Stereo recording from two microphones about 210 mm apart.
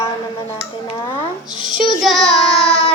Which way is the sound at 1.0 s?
20° left (ahead or behind).